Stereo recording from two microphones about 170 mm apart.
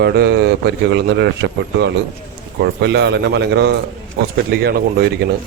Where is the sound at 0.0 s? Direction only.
70° right (ahead or behind).